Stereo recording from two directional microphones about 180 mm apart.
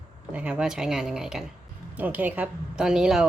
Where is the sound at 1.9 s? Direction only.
10° right (ahead or behind).